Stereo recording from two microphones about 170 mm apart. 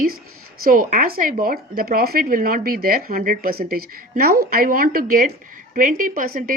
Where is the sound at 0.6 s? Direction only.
55° right (ahead or behind).